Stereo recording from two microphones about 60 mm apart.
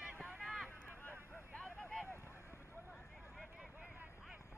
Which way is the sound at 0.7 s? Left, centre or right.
Left.